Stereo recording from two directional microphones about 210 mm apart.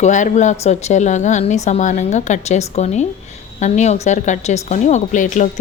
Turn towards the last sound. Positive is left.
turn(degrees=35)  # may be behind; listen again after turning